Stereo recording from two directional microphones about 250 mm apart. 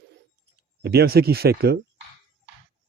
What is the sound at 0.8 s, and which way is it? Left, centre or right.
Speech, right.